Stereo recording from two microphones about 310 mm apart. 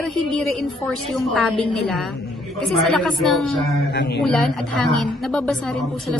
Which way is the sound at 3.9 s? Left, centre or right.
Left.